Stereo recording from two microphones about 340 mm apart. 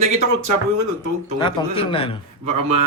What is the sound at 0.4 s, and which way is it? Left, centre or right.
Speech, right.